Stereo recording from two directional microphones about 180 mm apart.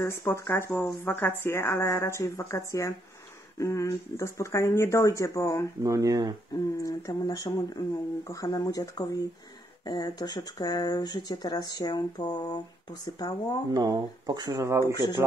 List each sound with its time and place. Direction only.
0.0 s speech: 15° left (ahead or behind)
5.8 s speech: 20° right (ahead or behind)
6.8 s speech: 20° left (ahead or behind)
13.7 s speech: 20° right (ahead or behind)